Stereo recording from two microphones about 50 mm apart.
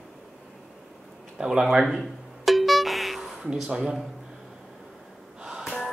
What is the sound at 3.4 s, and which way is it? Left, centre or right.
Speech, centre.